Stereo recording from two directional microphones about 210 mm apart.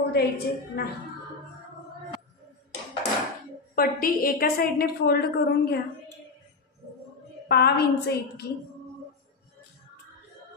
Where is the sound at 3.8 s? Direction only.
45° left (ahead or behind).